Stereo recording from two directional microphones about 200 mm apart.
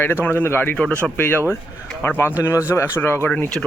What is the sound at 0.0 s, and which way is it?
Speech, 10° left (ahead or behind).